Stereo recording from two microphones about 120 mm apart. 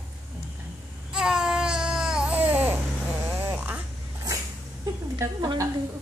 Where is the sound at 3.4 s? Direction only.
20° right (ahead or behind).